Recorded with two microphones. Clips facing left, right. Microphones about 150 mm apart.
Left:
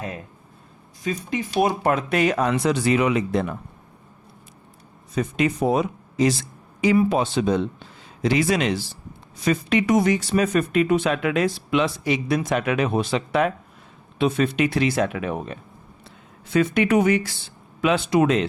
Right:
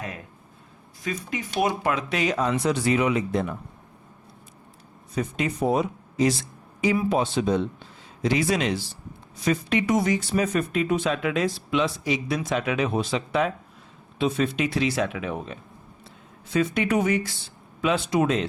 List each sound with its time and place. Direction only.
1.0 s speech: 25° left (ahead or behind)
1.5 s speech: 40° left (ahead or behind); by 3.5 s 75° left (ahead or behind)
5.1 s speech: 80° left
6.8 s a man's voice: 80° left; by 15.5 s 55° left (ahead or behind)
16.5 s a man's voice: 70° left (ahead or behind)